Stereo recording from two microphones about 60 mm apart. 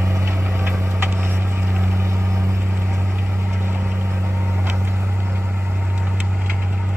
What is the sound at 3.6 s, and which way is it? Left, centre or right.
Vehicle, right.